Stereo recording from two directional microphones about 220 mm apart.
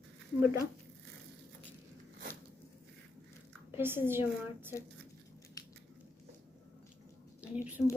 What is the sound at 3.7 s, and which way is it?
Speech, 10° right (ahead or behind).